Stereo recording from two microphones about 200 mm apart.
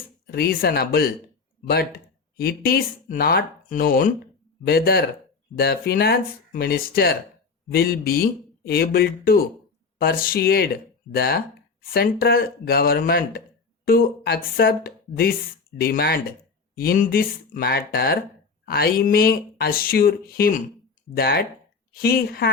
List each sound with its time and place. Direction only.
0.3 s speech: 50° left (ahead or behind)
2.4 s speech: 50° left (ahead or behind)